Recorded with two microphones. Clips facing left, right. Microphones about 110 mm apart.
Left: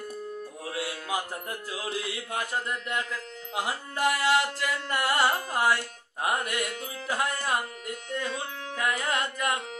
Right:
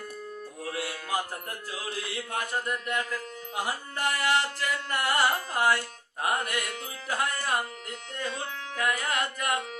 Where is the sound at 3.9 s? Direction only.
20° left (ahead or behind).